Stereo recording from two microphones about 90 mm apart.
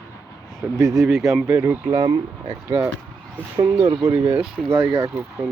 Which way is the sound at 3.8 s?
50° right (ahead or behind).